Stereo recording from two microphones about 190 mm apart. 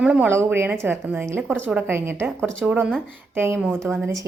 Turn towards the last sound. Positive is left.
turn(degrees=-10)  # may be behind; listen again after turning